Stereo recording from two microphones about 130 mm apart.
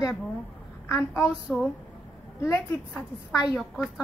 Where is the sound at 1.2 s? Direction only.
5° right (ahead or behind).